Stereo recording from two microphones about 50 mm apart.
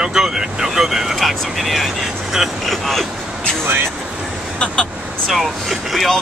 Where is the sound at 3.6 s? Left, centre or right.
Right.